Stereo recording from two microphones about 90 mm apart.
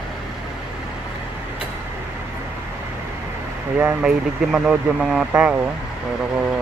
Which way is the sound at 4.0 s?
10° right (ahead or behind).